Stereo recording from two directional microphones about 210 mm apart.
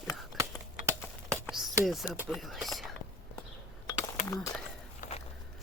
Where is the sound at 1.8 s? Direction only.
Centre (ahead or behind).